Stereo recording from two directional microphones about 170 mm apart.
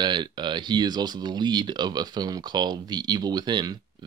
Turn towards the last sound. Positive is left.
turn(degrees=-25)  # may be behind; listen again after turning